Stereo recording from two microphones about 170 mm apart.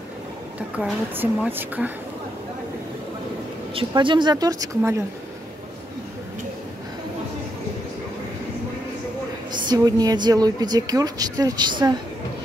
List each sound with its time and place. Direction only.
0.7 s a woman's voice: 10° right (ahead or behind)
3.7 s a woman's voice: 30° right (ahead or behind)
9.5 s a woman's voice: 25° right (ahead or behind)